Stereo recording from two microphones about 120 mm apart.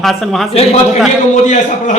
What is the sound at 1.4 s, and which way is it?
Speech, 90° left.